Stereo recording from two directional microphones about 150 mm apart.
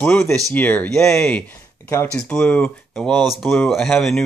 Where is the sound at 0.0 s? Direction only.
15° left (ahead or behind).